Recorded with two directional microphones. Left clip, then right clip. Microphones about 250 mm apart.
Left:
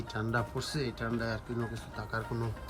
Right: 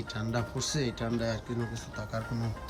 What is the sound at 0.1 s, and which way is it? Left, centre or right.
Speech, centre.